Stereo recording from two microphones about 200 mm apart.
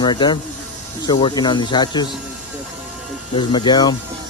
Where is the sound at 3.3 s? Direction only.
20° left (ahead or behind).